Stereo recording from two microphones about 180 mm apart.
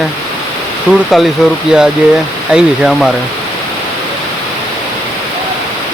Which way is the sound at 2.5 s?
5° right (ahead or behind).